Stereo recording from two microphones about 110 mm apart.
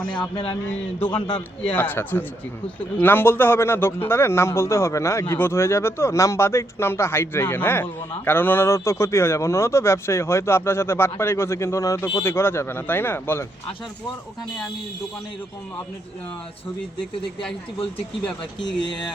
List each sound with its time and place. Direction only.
0.2 s a man's voice: 45° left (ahead or behind)
1.7 s a man's voice: 20° left (ahead or behind)
18.8 s a man's voice: 45° left (ahead or behind)